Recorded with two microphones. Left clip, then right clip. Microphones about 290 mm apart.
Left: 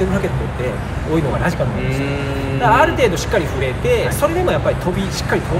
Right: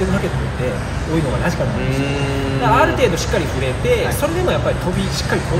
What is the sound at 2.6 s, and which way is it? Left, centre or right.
Speech, centre.